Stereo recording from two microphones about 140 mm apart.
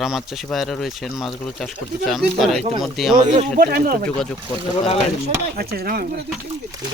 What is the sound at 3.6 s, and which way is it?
Speech, 90° right.